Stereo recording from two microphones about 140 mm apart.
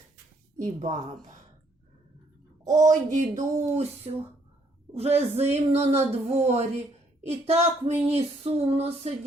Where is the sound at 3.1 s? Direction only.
60° right (ahead or behind).